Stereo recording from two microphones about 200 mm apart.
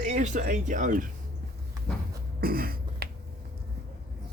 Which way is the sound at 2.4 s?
50° right (ahead or behind).